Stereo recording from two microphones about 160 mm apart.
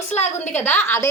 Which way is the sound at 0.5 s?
10° left (ahead or behind).